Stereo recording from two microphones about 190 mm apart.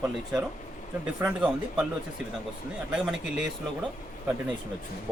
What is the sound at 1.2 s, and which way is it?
Speech, 5° right (ahead or behind).